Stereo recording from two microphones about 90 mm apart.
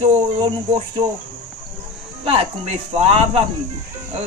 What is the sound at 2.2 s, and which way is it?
Speech, 90° right.